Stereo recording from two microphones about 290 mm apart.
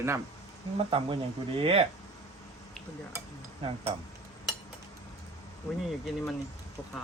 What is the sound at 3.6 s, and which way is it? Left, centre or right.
Speech, centre.